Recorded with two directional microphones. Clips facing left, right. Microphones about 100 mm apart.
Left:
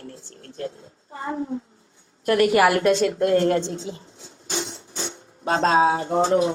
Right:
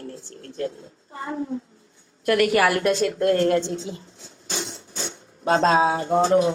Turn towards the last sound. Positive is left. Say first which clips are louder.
# even
turn(degrees=30)  # may be behind; listen again after turning